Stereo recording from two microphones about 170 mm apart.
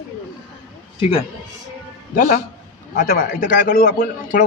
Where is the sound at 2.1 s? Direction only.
60° left (ahead or behind).